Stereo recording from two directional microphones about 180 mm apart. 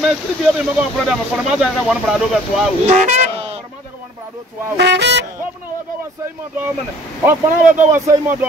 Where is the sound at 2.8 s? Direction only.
40° right (ahead or behind).